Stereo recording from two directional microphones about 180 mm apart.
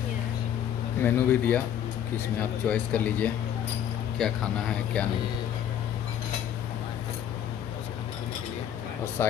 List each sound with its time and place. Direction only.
1.0 s speech: 10° left (ahead or behind)